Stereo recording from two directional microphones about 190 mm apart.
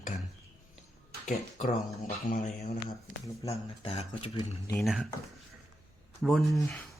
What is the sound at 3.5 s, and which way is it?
Speech, 35° left (ahead or behind).